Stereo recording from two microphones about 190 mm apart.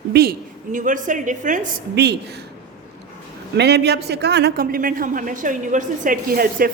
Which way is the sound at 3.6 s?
60° right (ahead or behind).